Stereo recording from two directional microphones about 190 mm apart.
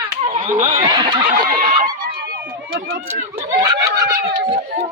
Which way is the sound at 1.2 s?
50° right (ahead or behind).